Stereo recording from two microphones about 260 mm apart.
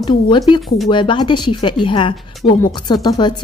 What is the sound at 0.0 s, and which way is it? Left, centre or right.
Speech, centre.